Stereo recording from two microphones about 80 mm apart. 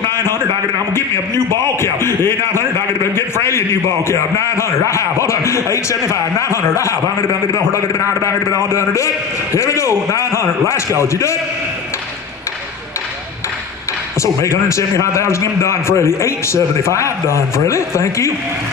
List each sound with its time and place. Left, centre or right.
0.1 s a sound: left
0.9 s a man's voice: left
14.2 s a man's voice: left